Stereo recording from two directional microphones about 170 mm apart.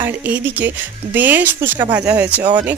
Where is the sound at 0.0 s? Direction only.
10° right (ahead or behind).